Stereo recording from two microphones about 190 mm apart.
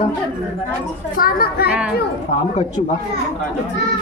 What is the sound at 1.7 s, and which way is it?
Speech, 5° right (ahead or behind).